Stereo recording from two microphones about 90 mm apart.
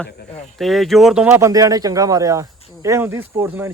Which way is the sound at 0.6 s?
Centre (ahead or behind).